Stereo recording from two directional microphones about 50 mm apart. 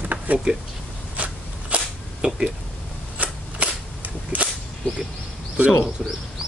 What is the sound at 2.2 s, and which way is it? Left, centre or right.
Speech, right.